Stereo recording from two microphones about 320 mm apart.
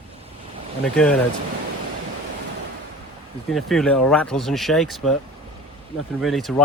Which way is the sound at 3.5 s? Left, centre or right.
Centre.